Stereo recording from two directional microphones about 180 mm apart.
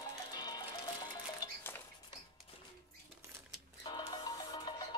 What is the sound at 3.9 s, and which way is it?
Music, 25° left (ahead or behind).